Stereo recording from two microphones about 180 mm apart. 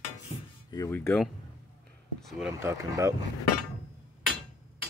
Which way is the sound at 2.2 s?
Centre (ahead or behind).